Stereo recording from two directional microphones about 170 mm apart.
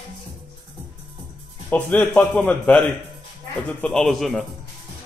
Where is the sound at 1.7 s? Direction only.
10° left (ahead or behind).